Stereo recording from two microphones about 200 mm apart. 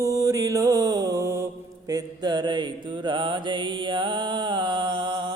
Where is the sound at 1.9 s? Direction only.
20° right (ahead or behind).